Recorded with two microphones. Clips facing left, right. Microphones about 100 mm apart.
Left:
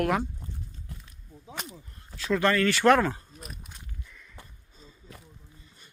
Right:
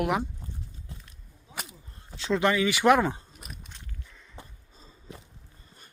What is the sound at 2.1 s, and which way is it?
Speech, 25° right (ahead or behind).